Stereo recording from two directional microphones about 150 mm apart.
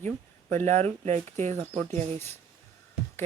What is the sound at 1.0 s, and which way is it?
Speech, 50° right (ahead or behind).